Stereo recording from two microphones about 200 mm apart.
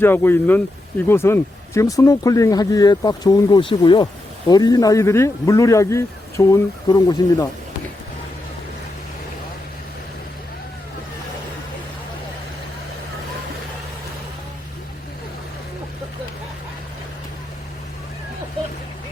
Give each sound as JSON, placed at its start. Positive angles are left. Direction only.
{"t": 0.0, "sound": "speech", "side_deg": 10}